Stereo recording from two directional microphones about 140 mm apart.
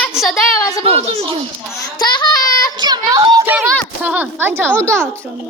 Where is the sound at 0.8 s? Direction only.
45° right (ahead or behind).